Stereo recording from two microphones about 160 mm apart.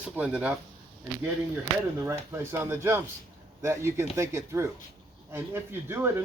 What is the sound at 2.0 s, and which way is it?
Speech, 15° right (ahead or behind).